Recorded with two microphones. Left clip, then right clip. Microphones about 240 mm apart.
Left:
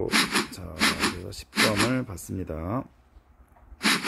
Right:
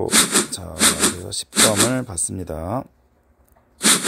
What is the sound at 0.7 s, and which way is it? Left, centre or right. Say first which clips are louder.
Dog: right 5 dB; centre.